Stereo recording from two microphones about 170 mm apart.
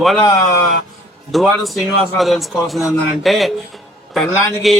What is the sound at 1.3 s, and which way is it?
A man's voice, centre (ahead or behind).